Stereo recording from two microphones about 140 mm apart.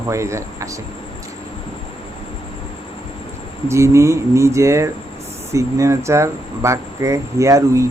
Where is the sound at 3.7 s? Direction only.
20° right (ahead or behind).